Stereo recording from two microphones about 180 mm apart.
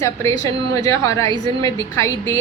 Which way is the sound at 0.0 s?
15° left (ahead or behind).